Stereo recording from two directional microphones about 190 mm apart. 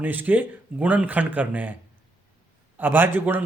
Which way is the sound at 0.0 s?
10° right (ahead or behind).